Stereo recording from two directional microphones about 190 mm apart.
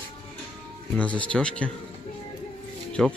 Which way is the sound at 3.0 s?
Centre (ahead or behind).